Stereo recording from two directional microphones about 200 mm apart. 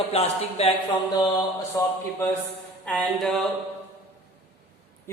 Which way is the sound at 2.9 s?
5° left (ahead or behind).